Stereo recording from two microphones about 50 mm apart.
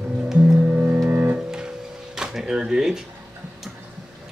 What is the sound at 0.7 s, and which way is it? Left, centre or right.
Music, right.